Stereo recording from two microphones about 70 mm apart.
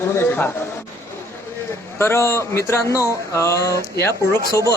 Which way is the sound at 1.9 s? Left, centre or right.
Left.